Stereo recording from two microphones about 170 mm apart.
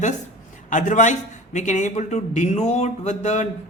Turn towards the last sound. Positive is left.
turn(degrees=45)  # may be behind; listen again after turning